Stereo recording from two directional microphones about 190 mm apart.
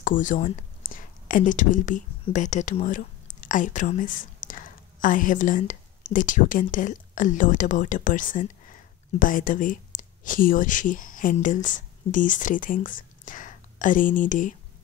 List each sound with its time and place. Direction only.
0.0 s speech: 45° left (ahead or behind)